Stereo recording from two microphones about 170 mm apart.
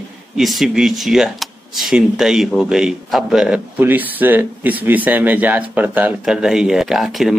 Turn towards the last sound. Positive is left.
turn(degrees=0)  # may be behind; listen again after turning